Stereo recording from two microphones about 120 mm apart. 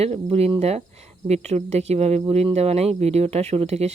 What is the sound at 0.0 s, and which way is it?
Speech, 55° right (ahead or behind).